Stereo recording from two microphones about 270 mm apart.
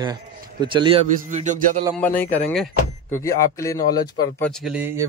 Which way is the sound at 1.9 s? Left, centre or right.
Centre.